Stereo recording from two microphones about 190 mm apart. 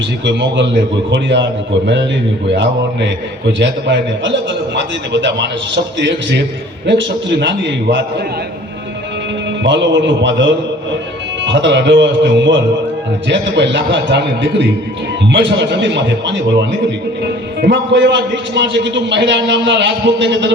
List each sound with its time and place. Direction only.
0.3 s a man's voice: 65° right (ahead or behind)
2.5 s a man's voice: 65° right (ahead or behind)
9.6 s a man's voice: 70° right (ahead or behind)